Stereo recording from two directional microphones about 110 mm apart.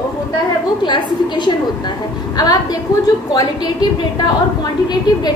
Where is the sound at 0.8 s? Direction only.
45° left (ahead or behind).